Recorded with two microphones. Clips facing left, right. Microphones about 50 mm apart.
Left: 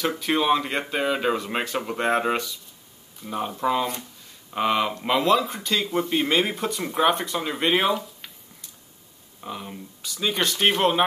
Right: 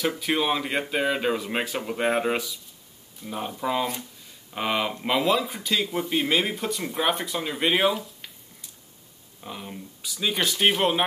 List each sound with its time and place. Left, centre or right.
0.2 s speech: centre